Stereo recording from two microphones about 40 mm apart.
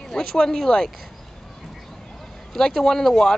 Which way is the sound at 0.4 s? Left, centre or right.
Centre.